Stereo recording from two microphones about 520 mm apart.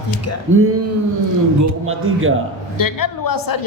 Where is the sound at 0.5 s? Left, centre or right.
Right.